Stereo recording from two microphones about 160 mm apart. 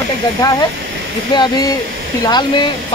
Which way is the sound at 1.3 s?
30° left (ahead or behind).